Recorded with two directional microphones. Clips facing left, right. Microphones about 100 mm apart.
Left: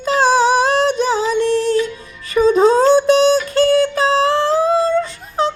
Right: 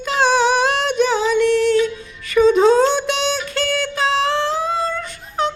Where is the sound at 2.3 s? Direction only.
35° left (ahead or behind).